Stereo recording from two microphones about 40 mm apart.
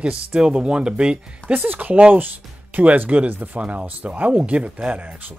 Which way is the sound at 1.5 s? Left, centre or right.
Right.